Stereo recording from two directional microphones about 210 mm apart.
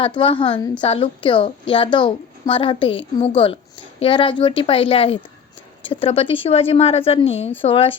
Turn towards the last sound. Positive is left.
turn(degrees=25)  # may be behind; listen again after turning